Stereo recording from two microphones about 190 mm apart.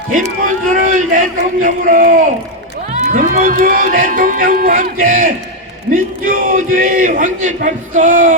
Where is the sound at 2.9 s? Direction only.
45° right (ahead or behind).